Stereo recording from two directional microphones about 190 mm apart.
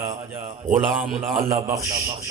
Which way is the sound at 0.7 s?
Centre (ahead or behind).